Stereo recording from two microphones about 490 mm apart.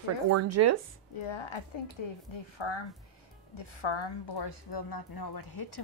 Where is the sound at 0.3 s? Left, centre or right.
Right.